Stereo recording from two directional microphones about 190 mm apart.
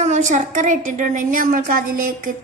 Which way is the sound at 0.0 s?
40° right (ahead or behind).